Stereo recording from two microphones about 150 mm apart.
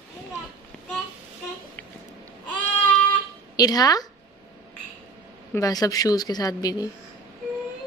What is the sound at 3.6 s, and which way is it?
Speech, 25° left (ahead or behind).